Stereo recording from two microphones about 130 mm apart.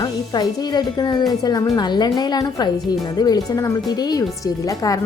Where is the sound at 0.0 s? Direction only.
30° left (ahead or behind).